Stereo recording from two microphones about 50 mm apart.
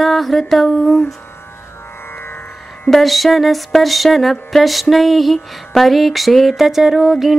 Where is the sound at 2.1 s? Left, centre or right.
Left.